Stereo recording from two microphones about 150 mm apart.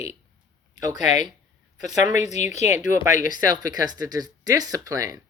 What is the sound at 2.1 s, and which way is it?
A woman's voice, 50° left (ahead or behind).